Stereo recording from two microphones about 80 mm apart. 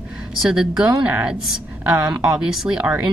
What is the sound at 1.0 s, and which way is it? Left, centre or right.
Speech, centre.